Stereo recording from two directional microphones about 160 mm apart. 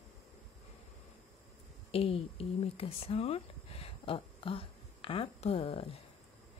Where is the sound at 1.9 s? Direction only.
35° left (ahead or behind).